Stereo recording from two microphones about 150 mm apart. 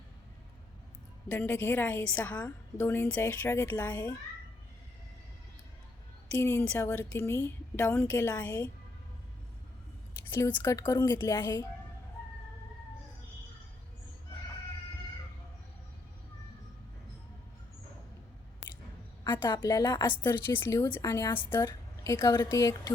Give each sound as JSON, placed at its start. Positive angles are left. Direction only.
{"t": 1.3, "sound": "a woman's voice", "side_deg": 15}
{"t": 6.4, "sound": "a woman's voice", "side_deg": 15}
{"t": 10.3, "sound": "a woman's voice", "side_deg": 20}
{"t": 19.2, "sound": "a woman's voice", "side_deg": 30}
{"t": 20.1, "sound": "a woman's voice", "side_deg": 15}